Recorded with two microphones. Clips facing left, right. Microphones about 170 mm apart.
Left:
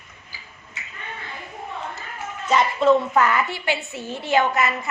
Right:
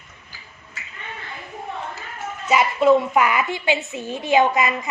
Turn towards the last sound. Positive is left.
turn(degrees=-15)  # may be behind; listen again after turning